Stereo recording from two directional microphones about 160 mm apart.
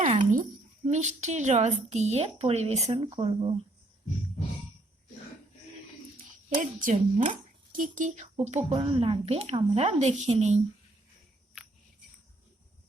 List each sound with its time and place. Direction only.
0.2 s a sound: 55° right (ahead or behind)
0.9 s speech: 45° right (ahead or behind); by 3.5 s 30° right (ahead or behind)
6.6 s speech: 55° right (ahead or behind)